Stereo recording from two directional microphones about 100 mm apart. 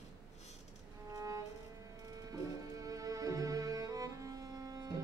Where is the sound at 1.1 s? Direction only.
35° right (ahead or behind).